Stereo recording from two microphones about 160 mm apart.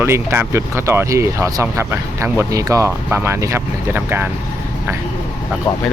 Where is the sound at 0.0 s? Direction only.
15° right (ahead or behind).